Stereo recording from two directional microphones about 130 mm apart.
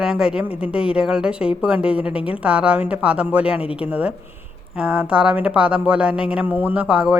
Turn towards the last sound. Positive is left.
turn(degrees=-10)  # may be behind; listen again after turning